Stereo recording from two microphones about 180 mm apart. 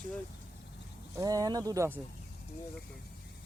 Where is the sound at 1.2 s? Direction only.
20° right (ahead or behind).